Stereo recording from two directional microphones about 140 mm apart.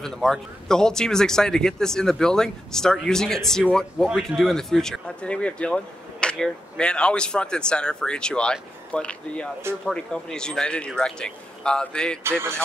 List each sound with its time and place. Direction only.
0.0 s speech: 5° left (ahead or behind)
12.2 s speech: 20° right (ahead or behind)